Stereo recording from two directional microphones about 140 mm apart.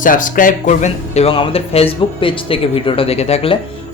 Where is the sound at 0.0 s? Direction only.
70° left (ahead or behind); by 3.6 s 45° left (ahead or behind).